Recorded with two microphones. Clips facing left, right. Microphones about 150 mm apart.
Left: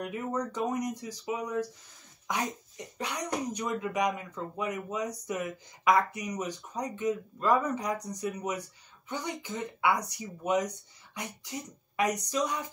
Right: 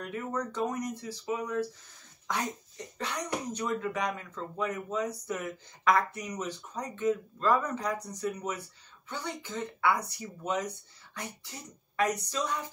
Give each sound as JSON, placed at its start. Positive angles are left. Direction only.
{"t": 0.0, "sound": "speech", "side_deg": 15}